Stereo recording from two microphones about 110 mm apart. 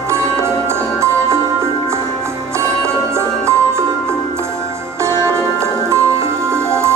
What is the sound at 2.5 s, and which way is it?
Music, 25° right (ahead or behind).